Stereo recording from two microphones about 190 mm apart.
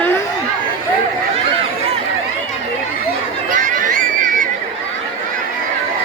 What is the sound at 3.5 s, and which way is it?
Chatter, 45° right (ahead or behind).